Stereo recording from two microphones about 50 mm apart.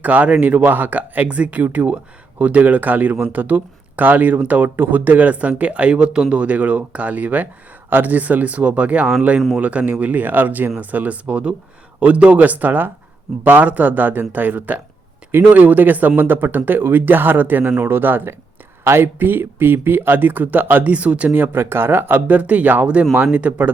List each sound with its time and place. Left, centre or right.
0.0 s speech: right
21.3 s speech: right
22.3 s speech: right